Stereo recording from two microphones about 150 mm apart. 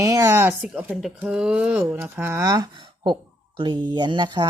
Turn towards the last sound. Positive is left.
turn(degrees=-30)  # may be behind; listen again after turning